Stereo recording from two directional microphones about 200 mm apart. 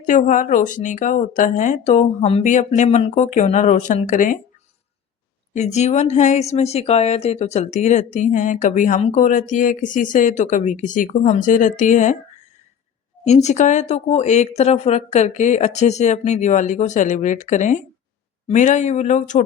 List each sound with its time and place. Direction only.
0.0 s speech: 40° left (ahead or behind)
5.5 s speech: 35° left (ahead or behind)
13.2 s speech: 35° left (ahead or behind)